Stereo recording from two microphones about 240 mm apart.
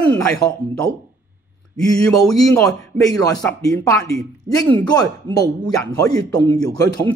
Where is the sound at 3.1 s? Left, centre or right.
Centre.